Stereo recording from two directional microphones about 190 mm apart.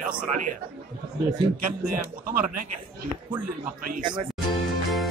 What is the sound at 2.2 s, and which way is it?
Speech, 45° right (ahead or behind).